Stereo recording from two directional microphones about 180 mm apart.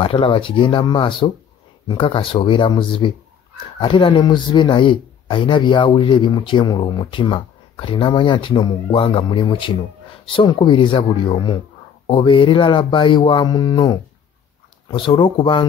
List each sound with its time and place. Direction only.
0.0 s a man's voice: 30° left (ahead or behind)